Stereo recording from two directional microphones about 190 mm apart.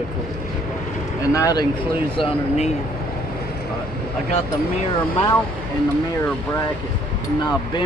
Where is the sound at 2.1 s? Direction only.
30° left (ahead or behind).